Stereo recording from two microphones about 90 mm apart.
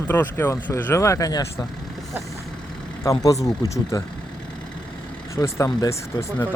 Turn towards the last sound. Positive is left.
turn(degrees=30)  # may be behind; listen again after turning